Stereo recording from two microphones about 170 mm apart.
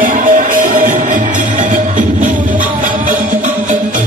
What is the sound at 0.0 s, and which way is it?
Music, 50° right (ahead or behind).